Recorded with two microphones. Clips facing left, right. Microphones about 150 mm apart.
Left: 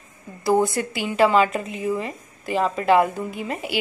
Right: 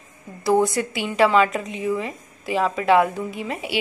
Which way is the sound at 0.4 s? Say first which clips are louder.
Right 1 dB; centre (ahead or behind).